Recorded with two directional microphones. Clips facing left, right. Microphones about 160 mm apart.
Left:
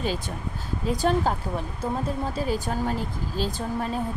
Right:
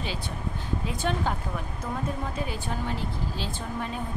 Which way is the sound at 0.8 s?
40° left (ahead or behind).